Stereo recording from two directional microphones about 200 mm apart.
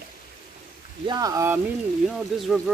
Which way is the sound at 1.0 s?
20° right (ahead or behind).